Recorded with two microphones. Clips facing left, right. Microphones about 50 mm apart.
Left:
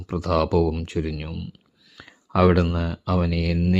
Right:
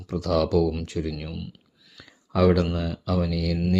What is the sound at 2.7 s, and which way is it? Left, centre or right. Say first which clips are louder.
Speech: left 2 dB; left.